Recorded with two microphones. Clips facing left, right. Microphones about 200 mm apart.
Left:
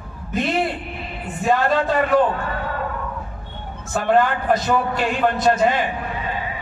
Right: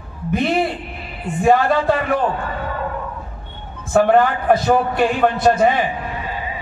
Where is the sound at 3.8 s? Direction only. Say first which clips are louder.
Right 4 dB; 60° right (ahead or behind).